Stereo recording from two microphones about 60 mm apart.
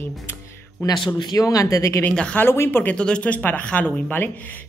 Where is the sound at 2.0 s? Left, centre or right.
Centre.